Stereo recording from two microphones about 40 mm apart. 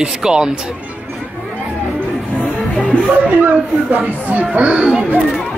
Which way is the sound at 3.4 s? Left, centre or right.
Right.